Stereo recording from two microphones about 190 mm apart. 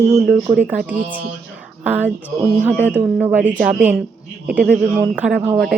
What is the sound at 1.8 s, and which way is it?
A woman's voice, 10° right (ahead or behind).